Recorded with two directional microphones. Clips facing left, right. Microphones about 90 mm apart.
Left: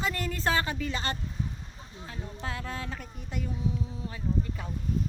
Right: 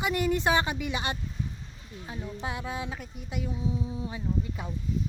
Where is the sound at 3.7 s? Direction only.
15° right (ahead or behind).